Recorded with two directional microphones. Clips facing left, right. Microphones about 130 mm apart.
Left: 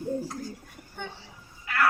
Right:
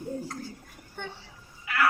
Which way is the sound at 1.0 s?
Centre (ahead or behind).